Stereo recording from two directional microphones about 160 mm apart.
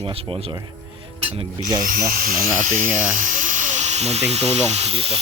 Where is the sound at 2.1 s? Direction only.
60° right (ahead or behind).